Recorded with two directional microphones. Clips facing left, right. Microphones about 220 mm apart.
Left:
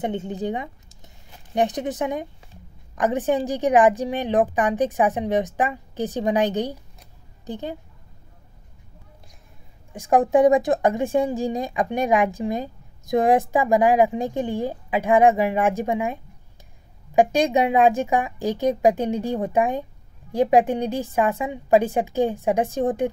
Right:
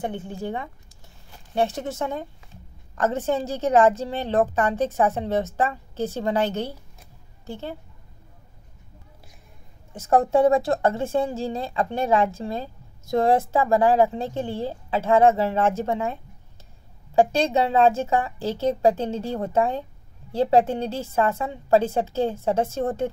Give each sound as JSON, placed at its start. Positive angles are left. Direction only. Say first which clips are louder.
{"t": 0.0, "sound": "speech", "louder": "left 4 dB", "side_deg": 20}
{"t": 9.9, "sound": "speech", "louder": "left 2 dB", "side_deg": 15}